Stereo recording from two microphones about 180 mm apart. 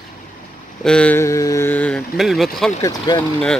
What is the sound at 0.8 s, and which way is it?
Speech, 5° left (ahead or behind).